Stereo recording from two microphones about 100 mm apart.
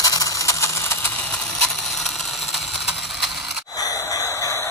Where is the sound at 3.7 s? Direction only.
35° left (ahead or behind).